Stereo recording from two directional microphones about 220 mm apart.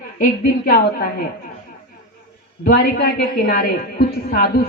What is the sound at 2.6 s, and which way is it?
A woman's voice, 45° left (ahead or behind).